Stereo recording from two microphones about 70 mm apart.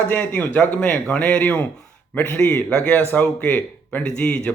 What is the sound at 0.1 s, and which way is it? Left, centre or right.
Speech, left.